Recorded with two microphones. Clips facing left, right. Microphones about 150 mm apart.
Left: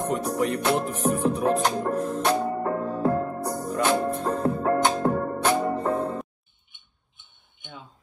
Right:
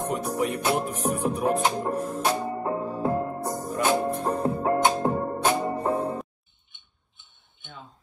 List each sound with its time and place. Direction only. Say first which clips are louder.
0.0 s music: left 2 dB; 5° right (ahead or behind)